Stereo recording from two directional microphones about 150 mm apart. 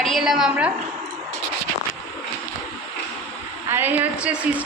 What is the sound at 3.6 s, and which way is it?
Speech, 15° right (ahead or behind).